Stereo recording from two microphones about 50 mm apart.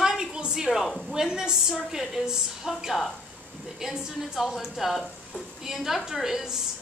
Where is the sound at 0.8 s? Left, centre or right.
Centre.